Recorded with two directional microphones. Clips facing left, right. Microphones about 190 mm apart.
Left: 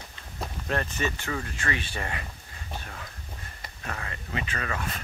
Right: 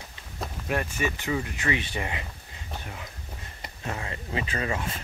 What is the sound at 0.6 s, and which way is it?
Speech, 10° right (ahead or behind).